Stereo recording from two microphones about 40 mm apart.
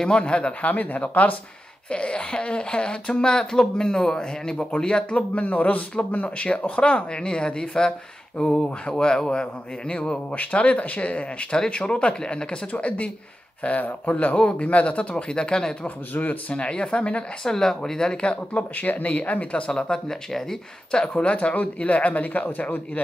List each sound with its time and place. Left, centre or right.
0.1 s speech: left
1.9 s speech: left
10.3 s speech: left
12.7 s speech: left
16.2 s speech: left
16.6 s speech: left
17.5 s speech: centre
18.2 s speech: left
18.6 s speech: left
19.5 s speech: left
19.9 s speech: centre
21.1 s speech: left